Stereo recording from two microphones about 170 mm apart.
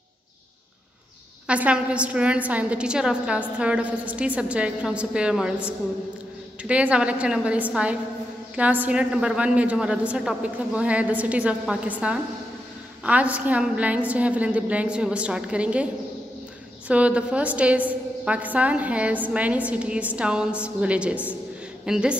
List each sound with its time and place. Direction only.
1.5 s a woman's voice: 5° right (ahead or behind)